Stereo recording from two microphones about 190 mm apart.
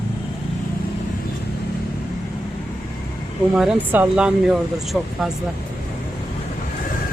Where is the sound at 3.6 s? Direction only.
5° right (ahead or behind).